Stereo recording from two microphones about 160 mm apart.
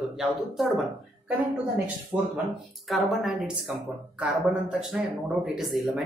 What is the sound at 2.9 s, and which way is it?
Speech, centre (ahead or behind).